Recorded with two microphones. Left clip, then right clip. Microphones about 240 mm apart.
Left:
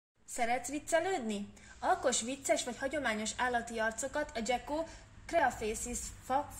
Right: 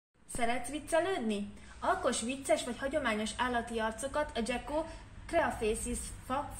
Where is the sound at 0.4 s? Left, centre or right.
Left.